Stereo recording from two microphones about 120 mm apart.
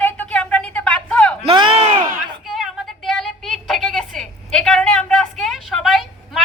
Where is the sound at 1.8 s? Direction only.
60° right (ahead or behind).